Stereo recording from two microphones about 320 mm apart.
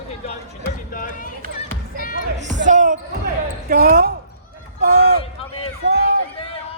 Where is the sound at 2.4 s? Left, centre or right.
Right.